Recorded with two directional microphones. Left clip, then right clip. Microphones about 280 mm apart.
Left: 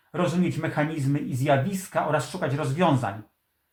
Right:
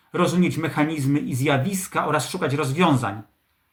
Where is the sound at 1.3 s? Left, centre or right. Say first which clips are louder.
Left 3 dB; centre.